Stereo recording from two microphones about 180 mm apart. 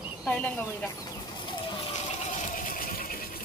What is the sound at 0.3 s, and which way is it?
Speech, 10° left (ahead or behind).